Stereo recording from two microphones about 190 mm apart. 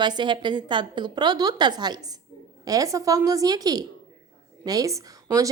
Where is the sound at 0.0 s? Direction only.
25° right (ahead or behind).